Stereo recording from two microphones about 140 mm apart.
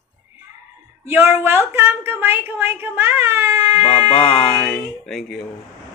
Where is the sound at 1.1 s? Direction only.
15° right (ahead or behind).